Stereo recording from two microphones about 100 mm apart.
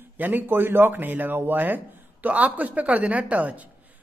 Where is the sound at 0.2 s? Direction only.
20° right (ahead or behind).